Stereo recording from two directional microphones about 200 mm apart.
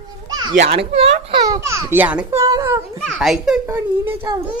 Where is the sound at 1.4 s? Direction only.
15° right (ahead or behind).